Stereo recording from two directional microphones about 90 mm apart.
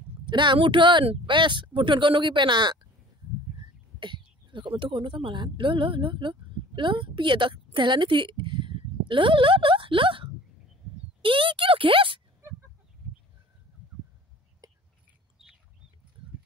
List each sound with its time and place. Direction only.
0.3 s speech: 60° right (ahead or behind)
4.0 s speech: 60° right (ahead or behind); by 12.2 s 80° right
14.6 s whispering: 40° right (ahead or behind)
15.4 s bird: 5° right (ahead or behind)